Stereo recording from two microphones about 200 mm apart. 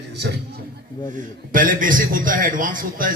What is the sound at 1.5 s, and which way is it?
A man's voice, 45° right (ahead or behind).